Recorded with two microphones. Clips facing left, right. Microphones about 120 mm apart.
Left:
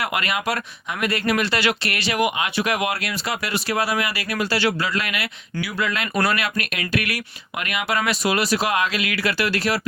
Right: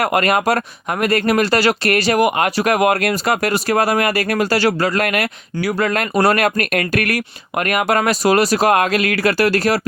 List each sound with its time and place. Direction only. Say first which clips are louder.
0.0 s speech: right 9 dB; 45° right (ahead or behind)